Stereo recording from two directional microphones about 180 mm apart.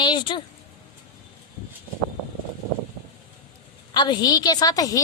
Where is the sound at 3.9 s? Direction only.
25° left (ahead or behind).